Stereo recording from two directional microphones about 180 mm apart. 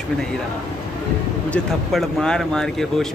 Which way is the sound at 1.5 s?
5° left (ahead or behind).